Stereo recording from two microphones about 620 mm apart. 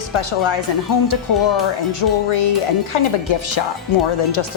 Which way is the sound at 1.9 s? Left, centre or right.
Left.